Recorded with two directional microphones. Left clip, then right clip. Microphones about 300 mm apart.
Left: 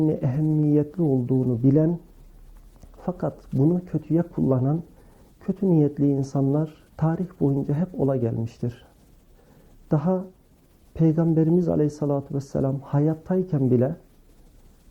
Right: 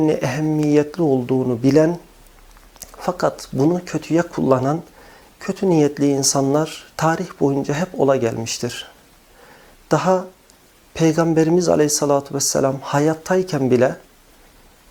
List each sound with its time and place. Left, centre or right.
0.0 s speech: centre
0.9 s speech: right
1.6 s speech: centre
9.9 s speech: centre